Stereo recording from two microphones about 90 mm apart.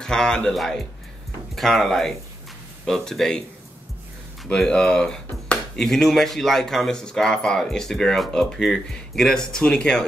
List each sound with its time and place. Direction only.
0.0 s speech: 10° left (ahead or behind)
4.5 s speech: 10° left (ahead or behind)